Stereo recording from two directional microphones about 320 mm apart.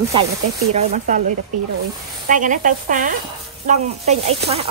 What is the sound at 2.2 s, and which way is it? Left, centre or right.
Speech, right.